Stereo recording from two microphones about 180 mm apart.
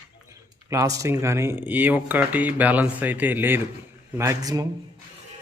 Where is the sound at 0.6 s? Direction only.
20° right (ahead or behind).